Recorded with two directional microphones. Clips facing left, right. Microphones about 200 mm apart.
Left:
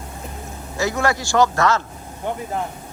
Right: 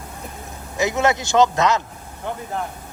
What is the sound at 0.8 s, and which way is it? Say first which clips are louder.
A man's voice: right 1 dB; 20° right (ahead or behind).